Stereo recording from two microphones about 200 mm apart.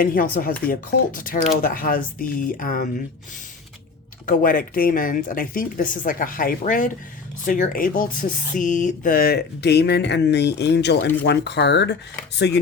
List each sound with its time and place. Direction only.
0.0 s speech: 45° left (ahead or behind)
4.3 s speech: 45° left (ahead or behind); by 12.6 s 60° left (ahead or behind)